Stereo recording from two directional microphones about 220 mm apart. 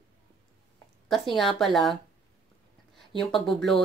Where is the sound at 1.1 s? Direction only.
Centre (ahead or behind).